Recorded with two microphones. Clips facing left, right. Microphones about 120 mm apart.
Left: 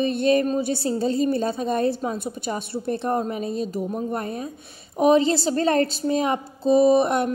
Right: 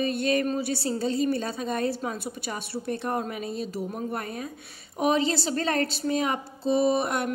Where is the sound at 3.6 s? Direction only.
50° left (ahead or behind).